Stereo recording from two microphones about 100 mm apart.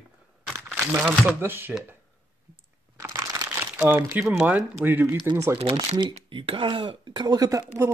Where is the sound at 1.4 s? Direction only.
20° right (ahead or behind).